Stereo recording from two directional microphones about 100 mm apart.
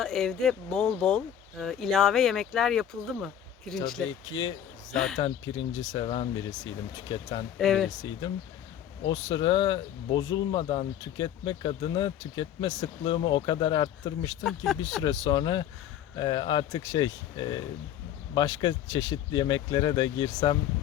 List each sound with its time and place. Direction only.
0.0 s speech: 5° left (ahead or behind)
5.2 s speech: 50° left (ahead or behind)
7.6 s speech: 5° left (ahead or behind)
7.9 s speech: 45° left (ahead or behind)
10.6 s speech: 65° left (ahead or behind)
11.0 s speech: 50° left (ahead or behind)
14.4 s speech: centre (ahead or behind)
15.0 s speech: 45° left (ahead or behind)